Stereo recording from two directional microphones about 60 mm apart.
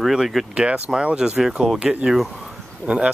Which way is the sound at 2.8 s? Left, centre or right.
Centre.